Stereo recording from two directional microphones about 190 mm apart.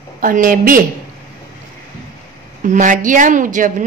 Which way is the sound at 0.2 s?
45° right (ahead or behind).